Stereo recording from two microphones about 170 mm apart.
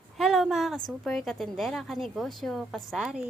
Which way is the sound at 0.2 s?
Centre (ahead or behind).